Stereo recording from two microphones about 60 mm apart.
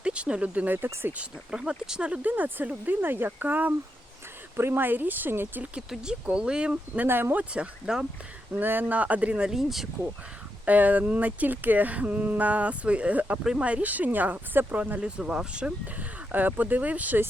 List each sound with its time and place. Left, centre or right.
0.0 s speech: centre
1.2 s speech: centre
2.2 s speech: right
4.5 s speech: right
6.2 s speech: centre
7.0 s speech: right
7.5 s speech: centre
8.5 s speech: right
9.5 s speech: centre
10.7 s speech: right
13.4 s speech: centre
13.7 s speech: right
15.2 s speech: centre
16.0 s speech: right